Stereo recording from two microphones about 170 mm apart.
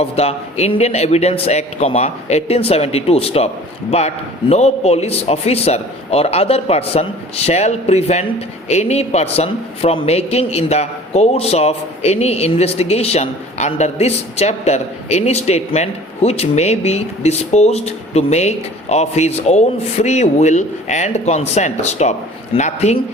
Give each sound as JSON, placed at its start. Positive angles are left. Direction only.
{"t": 0.0, "sound": "a man's voice", "side_deg": 35}